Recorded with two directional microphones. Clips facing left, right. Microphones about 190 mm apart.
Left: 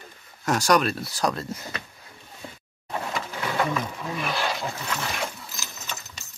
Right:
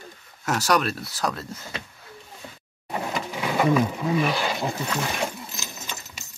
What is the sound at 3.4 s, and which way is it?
Sewing machine, 15° right (ahead or behind).